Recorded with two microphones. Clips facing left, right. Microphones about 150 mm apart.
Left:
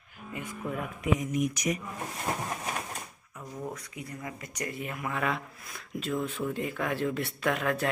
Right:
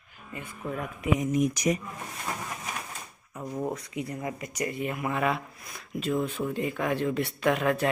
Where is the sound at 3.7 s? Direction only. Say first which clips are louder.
Right 7 dB; 20° right (ahead or behind).